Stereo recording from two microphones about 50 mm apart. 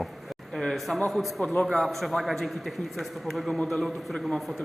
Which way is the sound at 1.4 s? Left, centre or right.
Left.